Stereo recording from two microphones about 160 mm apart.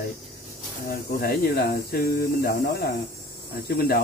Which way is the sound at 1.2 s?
70° left (ahead or behind).